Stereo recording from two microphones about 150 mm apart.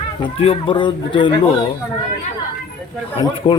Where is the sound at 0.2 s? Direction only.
35° left (ahead or behind).